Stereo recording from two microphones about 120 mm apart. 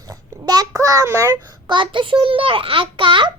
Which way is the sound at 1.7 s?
45° right (ahead or behind).